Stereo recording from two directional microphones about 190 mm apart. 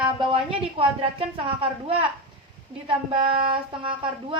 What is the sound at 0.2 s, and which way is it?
A woman's voice, 25° right (ahead or behind).